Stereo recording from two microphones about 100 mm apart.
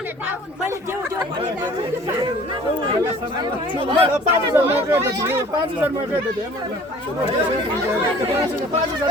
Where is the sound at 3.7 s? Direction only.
55° right (ahead or behind).